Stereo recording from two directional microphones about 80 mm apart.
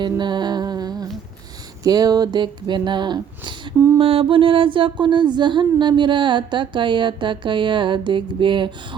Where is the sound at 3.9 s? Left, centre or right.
Right.